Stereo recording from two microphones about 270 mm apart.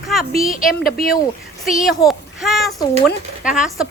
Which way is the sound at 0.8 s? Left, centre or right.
Left.